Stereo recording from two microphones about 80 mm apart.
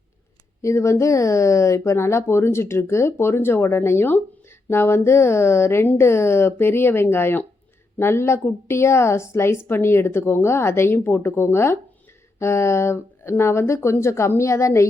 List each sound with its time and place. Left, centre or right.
0.6 s a woman's voice: left